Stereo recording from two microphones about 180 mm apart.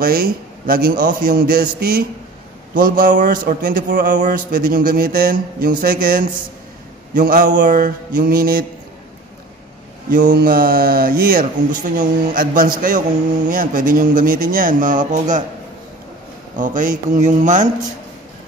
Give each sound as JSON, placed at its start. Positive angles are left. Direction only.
{"t": 0.0, "sound": "a man's voice", "side_deg": -55}
{"t": 10.1, "sound": "speech", "side_deg": -50}
{"t": 16.5, "sound": "speech", "side_deg": -45}